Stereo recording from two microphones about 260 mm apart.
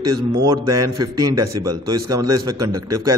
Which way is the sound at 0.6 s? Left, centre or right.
Right.